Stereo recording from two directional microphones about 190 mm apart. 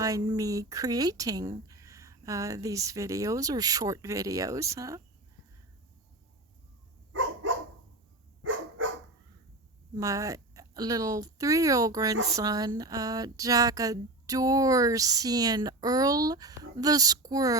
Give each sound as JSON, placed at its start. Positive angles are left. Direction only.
{"t": 0.0, "sound": "speech", "side_deg": -20}
{"t": 9.9, "sound": "speech", "side_deg": -15}